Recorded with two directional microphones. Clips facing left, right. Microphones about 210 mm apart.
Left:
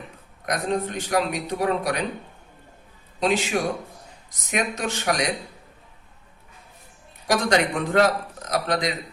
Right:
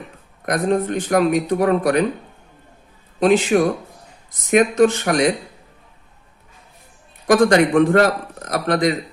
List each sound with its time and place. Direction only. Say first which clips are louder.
0.4 s a man's voice: right 6 dB; 55° right (ahead or behind)
3.2 s a man's voice: right 8 dB; 50° right (ahead or behind)
7.3 s a man's voice: right 8 dB; 50° right (ahead or behind)